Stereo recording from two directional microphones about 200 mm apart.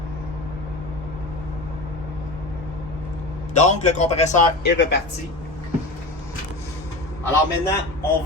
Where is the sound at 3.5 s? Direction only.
35° left (ahead or behind).